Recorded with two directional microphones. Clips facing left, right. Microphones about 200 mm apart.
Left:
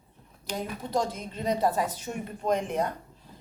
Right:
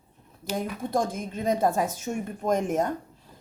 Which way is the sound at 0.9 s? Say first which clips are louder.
Right 1 dB; 50° right (ahead or behind).